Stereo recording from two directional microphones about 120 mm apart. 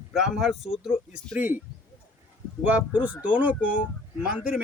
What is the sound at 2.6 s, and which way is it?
Speech, 10° right (ahead or behind).